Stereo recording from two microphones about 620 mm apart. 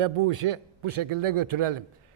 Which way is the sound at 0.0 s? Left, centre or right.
Right.